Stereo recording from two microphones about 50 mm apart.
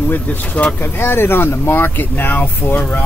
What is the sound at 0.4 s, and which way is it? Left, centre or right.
Speech, left.